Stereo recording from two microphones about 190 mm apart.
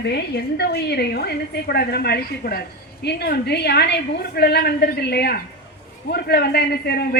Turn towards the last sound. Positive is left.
turn(degrees=55)  # may be behind; listen again after turning